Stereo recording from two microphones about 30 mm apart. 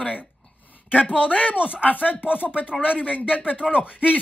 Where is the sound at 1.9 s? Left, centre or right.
Left.